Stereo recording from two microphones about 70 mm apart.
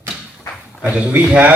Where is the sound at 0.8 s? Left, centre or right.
Right.